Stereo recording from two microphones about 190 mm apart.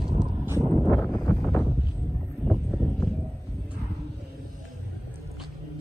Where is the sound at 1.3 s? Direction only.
5° left (ahead or behind).